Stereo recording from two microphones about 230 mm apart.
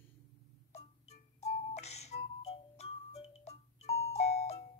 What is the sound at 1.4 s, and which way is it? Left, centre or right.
Music, left.